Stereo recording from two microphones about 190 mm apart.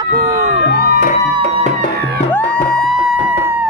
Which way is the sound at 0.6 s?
55° left (ahead or behind).